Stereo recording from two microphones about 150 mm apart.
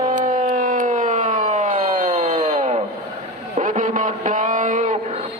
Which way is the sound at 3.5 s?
60° right (ahead or behind).